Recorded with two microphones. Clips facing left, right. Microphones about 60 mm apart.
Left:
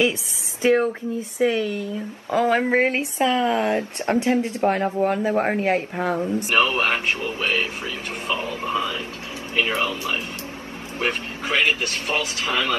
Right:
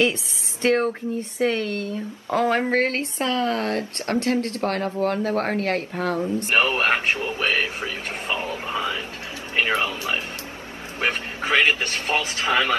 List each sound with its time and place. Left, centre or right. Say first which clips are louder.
0.6 s speech: left 2 dB; centre
1.7 s speech: even; right
2.5 s speech: left 2 dB; centre
6.5 s a man's voice: even; right
8.4 s a sound: left 2 dB; right
9.6 s a man's voice: even; right